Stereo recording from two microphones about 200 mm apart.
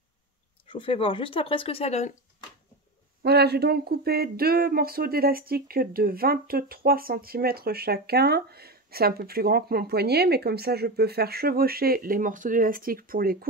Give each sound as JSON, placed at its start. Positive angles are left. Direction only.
{"t": 0.7, "sound": "speech", "side_deg": 25}
{"t": 3.2, "sound": "speech", "side_deg": -55}